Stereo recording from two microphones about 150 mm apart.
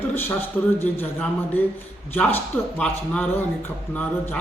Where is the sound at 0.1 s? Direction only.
15° left (ahead or behind).